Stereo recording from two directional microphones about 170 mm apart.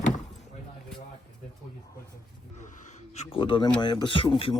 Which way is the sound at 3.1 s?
35° left (ahead or behind).